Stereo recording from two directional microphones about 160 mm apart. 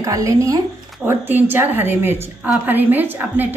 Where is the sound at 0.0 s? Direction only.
20° right (ahead or behind).